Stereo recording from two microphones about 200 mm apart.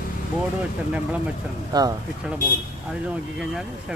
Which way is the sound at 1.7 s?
20° right (ahead or behind).